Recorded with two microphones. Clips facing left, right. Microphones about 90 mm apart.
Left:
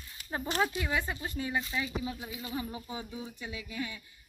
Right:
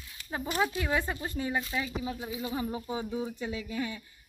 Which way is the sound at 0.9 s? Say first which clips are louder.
Right 2 dB; 5° right (ahead or behind).